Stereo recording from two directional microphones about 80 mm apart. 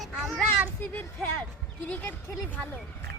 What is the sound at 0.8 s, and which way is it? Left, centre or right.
Speech, left.